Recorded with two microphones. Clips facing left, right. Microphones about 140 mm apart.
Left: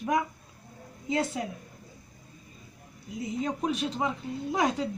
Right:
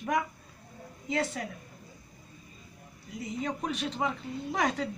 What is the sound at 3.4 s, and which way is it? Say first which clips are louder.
A woman's voice: left 3 dB; 10° left (ahead or behind).